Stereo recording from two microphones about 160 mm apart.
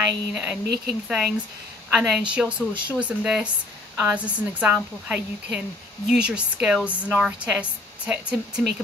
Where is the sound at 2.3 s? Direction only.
10° right (ahead or behind).